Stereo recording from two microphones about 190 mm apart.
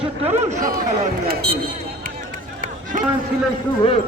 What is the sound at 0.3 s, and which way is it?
Speech, 35° right (ahead or behind).